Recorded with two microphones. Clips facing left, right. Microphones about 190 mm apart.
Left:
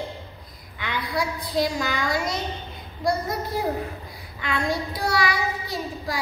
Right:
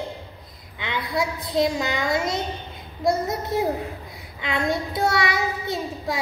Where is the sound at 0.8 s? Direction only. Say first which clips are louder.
Right 2 dB; 20° right (ahead or behind).